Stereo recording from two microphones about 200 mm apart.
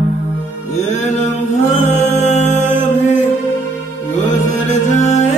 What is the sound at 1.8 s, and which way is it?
Music, 35° left (ahead or behind).